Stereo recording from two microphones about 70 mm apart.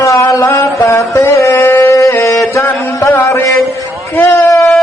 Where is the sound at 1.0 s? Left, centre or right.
Left.